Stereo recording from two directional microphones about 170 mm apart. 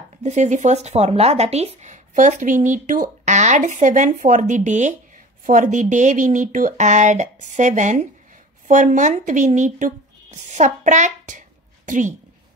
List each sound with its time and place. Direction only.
0.2 s speech: 45° right (ahead or behind)